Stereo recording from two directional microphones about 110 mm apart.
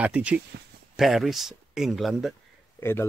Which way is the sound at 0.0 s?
10° right (ahead or behind).